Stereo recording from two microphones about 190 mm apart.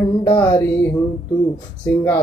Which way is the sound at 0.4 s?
10° left (ahead or behind).